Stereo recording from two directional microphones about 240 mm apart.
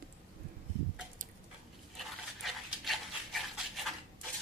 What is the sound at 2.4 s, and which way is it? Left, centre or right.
Dog, centre.